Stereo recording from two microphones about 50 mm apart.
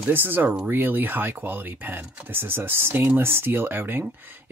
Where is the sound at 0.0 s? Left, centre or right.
Right.